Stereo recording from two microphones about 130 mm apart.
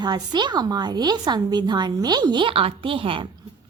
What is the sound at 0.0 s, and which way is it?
A woman's voice, 35° right (ahead or behind).